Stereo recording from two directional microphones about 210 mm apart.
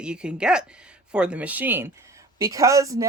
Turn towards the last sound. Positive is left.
turn(degrees=-15)  # may be behind; listen again after turning